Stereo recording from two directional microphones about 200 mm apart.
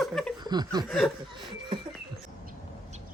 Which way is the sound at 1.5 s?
25° right (ahead or behind).